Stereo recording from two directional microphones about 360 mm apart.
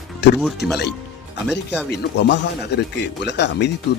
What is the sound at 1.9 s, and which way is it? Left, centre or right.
Speech, left.